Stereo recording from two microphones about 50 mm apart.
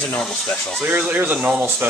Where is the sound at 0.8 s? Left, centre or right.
Right.